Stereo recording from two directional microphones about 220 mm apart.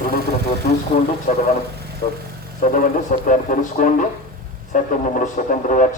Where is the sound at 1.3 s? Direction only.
35° left (ahead or behind).